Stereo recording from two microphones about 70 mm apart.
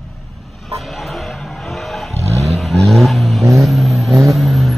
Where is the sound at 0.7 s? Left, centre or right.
Centre.